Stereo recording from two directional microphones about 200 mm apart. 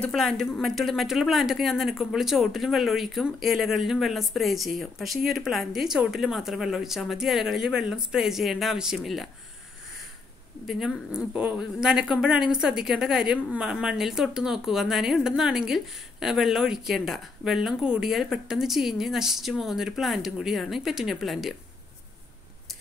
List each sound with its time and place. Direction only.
0.0 s a woman's voice: centre (ahead or behind)
10.7 s a woman's voice: centre (ahead or behind)